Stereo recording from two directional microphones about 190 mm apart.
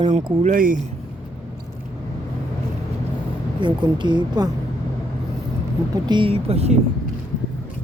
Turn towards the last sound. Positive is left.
turn(degrees=-35)  # may be behind; listen again after turning